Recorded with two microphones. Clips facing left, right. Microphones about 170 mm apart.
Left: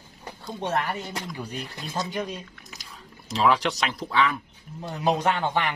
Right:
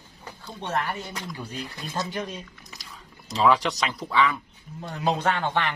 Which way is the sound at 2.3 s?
Centre (ahead or behind).